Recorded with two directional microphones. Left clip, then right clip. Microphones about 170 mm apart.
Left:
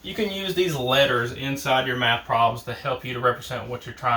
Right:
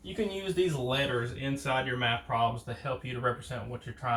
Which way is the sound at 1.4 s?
20° left (ahead or behind).